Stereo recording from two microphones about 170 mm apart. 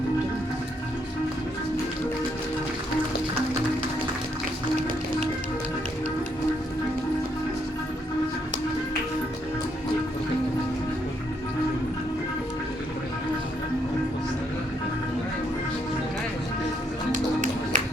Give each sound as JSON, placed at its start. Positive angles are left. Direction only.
{"t": 17.1, "sound": "music", "side_deg": -45}